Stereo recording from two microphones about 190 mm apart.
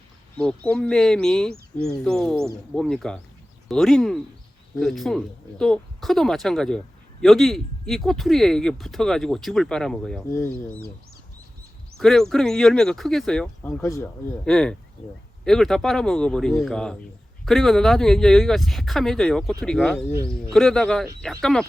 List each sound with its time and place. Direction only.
0.3 s speech: 5° left (ahead or behind)
10.2 s speech: 15° left (ahead or behind)
11.9 s speech: centre (ahead or behind)
13.8 s speech: 15° left (ahead or behind)
14.4 s speech: 5° left (ahead or behind)